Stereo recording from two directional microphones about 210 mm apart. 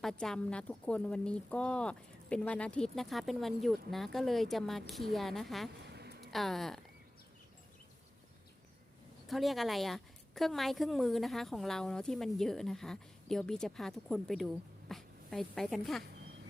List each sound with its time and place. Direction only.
0.0 s a woman's voice: centre (ahead or behind)
5.8 s a sound: 50° right (ahead or behind)
6.3 s a woman's voice: centre (ahead or behind)
9.2 s a woman's voice: centre (ahead or behind)